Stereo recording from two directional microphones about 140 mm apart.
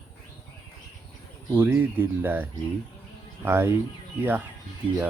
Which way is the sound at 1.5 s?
15° right (ahead or behind).